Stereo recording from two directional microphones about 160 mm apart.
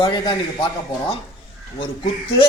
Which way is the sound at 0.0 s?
30° left (ahead or behind).